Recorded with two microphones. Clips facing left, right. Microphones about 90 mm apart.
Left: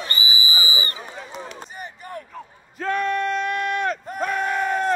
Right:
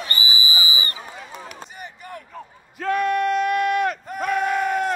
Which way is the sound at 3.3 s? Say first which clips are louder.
Right 4 dB; 35° left (ahead or behind).